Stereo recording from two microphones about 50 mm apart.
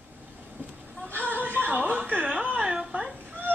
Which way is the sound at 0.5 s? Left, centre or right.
Right.